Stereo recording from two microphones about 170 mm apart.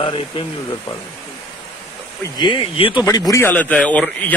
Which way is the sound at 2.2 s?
25° left (ahead or behind).